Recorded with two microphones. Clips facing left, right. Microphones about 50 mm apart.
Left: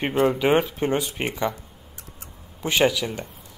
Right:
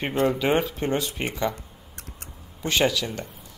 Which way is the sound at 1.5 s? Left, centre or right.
Right.